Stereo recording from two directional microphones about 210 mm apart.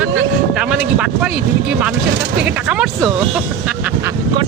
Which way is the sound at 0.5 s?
5° right (ahead or behind).